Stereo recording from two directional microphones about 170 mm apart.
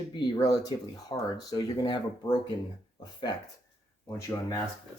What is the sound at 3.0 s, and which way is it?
Speech, 25° left (ahead or behind).